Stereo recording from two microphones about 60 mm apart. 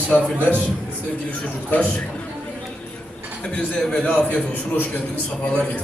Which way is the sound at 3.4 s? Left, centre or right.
Centre.